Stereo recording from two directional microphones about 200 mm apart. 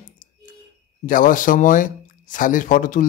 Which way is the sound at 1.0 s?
40° left (ahead or behind).